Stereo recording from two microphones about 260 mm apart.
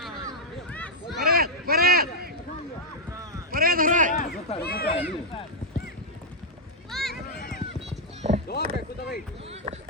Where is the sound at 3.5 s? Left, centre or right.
Right.